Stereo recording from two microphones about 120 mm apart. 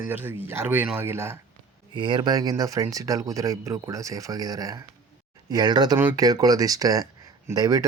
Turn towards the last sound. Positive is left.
turn(degrees=-30)  # may be behind; listen again after turning